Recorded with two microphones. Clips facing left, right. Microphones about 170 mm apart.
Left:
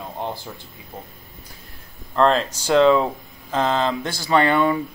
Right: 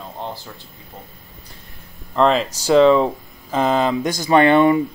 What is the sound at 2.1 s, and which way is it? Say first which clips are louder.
Speech: right 1 dB; 5° right (ahead or behind).